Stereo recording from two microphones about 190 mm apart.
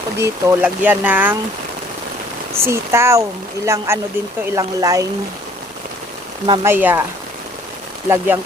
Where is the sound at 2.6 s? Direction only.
15° right (ahead or behind).